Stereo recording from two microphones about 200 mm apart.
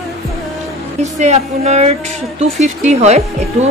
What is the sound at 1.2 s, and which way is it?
A woman's voice, 35° right (ahead or behind).